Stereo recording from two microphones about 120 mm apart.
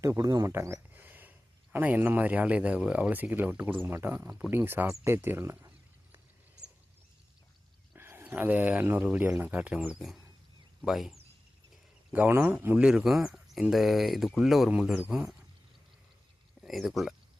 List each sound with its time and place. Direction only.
0.0 s speech: 25° right (ahead or behind)
7.9 s speech: 20° right (ahead or behind); by 11.2 s centre (ahead or behind)
12.1 s speech: 15° right (ahead or behind)
16.6 s speech: centre (ahead or behind)